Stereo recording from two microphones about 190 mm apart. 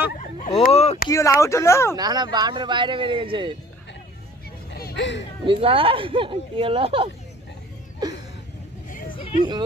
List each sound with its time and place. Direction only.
0.2 s speech: 40° left (ahead or behind)
1.0 s speech: 15° left (ahead or behind)
2.0 s speech: 20° right (ahead or behind)
4.6 s a sound: 60° left (ahead or behind)
5.4 s speech: 30° right (ahead or behind)